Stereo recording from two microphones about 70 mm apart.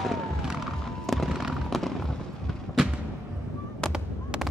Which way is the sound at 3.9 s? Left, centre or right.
Centre.